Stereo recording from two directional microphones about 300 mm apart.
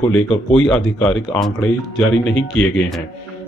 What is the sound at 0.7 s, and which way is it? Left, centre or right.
Speech, centre.